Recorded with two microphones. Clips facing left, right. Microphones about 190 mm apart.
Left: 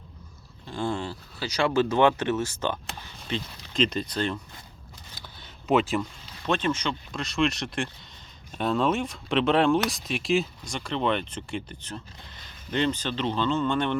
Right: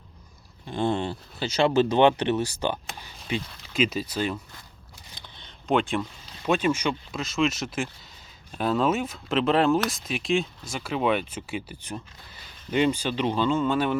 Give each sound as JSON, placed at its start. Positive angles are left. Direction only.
{"t": 0.7, "sound": "speech", "side_deg": -20}
{"t": 5.1, "sound": "a sound", "side_deg": 5}
{"t": 6.4, "sound": "speech", "side_deg": -10}